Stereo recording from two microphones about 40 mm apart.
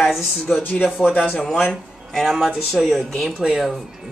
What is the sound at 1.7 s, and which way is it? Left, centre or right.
Speech, centre.